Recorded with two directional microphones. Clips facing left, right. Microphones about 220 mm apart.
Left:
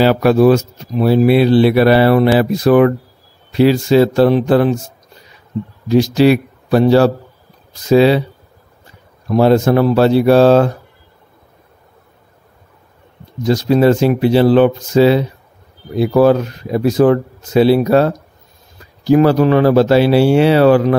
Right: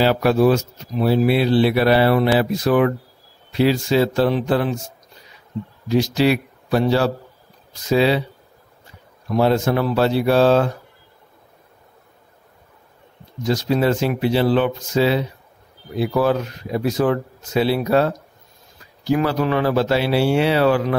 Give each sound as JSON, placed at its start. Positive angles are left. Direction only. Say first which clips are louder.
{"t": 0.0, "sound": "speech", "louder": "left 5 dB", "side_deg": 65}
{"t": 5.9, "sound": "speech", "louder": "left 7 dB", "side_deg": 45}
{"t": 9.3, "sound": "speech", "louder": "left 6 dB", "side_deg": 50}
{"t": 13.5, "sound": "speech", "louder": "left 7 dB", "side_deg": 45}